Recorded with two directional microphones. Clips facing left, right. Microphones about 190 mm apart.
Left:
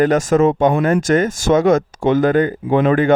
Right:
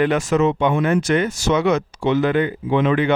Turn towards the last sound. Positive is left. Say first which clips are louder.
# left 4 dB
turn(degrees=45)  # may be behind; listen again after turning